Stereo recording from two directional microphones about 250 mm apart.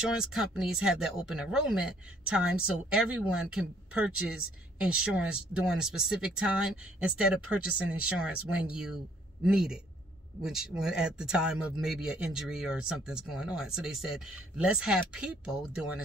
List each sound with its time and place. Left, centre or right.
0.1 s a man's voice: centre